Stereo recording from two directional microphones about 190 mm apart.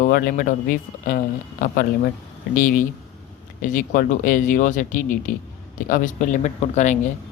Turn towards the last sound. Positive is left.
turn(degrees=40)  # may be behind; listen again after turning